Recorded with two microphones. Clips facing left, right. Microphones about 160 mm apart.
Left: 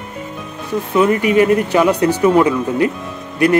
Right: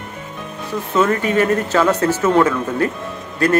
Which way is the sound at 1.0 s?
15° left (ahead or behind).